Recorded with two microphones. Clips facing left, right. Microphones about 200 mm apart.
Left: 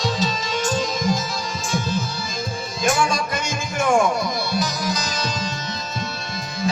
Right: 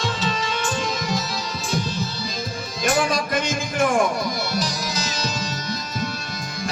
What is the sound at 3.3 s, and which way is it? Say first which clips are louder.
Music: right 3 dB; 50° right (ahead or behind).